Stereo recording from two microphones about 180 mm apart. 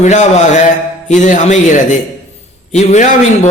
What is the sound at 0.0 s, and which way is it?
A man's voice, 40° left (ahead or behind).